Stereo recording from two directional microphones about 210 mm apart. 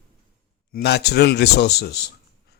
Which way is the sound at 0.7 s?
50° left (ahead or behind).